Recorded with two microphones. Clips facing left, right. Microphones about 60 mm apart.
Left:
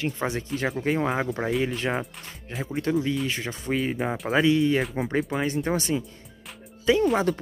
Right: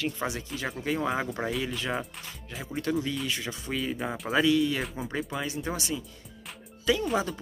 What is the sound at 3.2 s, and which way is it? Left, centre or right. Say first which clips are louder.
Speech: left 4 dB; left.